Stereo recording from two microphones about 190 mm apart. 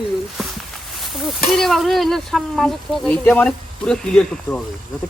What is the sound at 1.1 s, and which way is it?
Speech, centre (ahead or behind).